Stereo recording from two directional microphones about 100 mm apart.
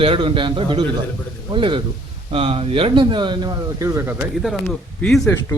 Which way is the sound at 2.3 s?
70° right (ahead or behind).